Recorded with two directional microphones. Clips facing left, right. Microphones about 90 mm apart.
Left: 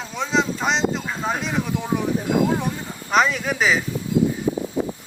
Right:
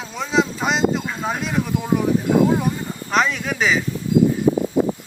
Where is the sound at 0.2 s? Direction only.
5° right (ahead or behind).